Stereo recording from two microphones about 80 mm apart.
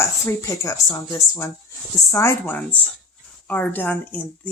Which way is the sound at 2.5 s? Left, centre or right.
Centre.